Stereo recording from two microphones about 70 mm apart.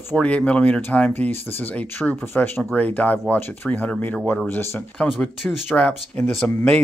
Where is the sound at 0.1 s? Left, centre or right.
Centre.